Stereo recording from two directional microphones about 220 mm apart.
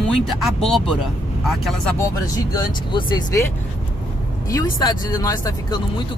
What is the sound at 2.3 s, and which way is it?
Speech, 15° left (ahead or behind).